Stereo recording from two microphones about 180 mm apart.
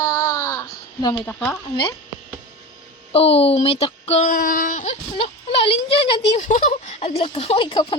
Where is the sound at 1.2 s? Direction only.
10° left (ahead or behind).